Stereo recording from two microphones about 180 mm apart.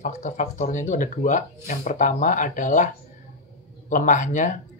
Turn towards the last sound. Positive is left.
turn(degrees=45)  # may be behind; listen again after turning